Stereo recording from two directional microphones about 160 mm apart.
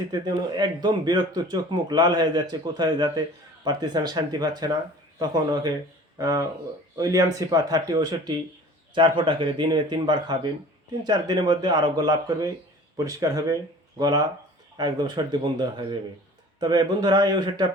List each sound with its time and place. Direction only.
0.1 s a man's voice: 25° right (ahead or behind)